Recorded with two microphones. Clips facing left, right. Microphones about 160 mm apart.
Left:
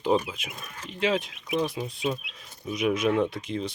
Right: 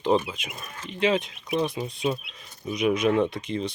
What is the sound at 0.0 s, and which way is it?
Speech, 5° left (ahead or behind).